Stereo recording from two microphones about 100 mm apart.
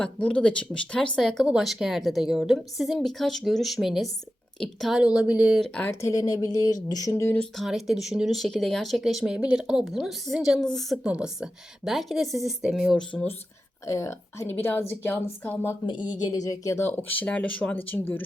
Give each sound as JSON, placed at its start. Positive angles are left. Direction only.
{"t": 0.0, "sound": "speech", "side_deg": 10}
{"t": 4.9, "sound": "speech", "side_deg": -10}
{"t": 5.6, "sound": "speech", "side_deg": 10}
{"t": 5.9, "sound": "speech", "side_deg": 30}
{"t": 7.3, "sound": "speech", "side_deg": 0}
{"t": 11.0, "sound": "speech", "side_deg": -10}
{"t": 13.8, "sound": "speech", "side_deg": 30}
{"t": 15.9, "sound": "speech", "side_deg": 50}
{"t": 16.3, "sound": "speech", "side_deg": 35}